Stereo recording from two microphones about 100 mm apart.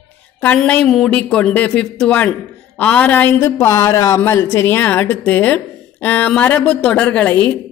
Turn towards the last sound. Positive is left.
turn(degrees=15)  # may be behind; listen again after turning